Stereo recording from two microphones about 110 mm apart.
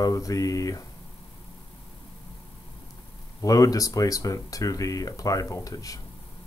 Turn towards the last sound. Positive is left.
turn(degrees=30)  # may be behind; listen again after turning